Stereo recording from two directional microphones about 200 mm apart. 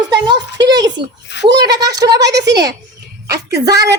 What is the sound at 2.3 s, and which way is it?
Speech, 55° right (ahead or behind).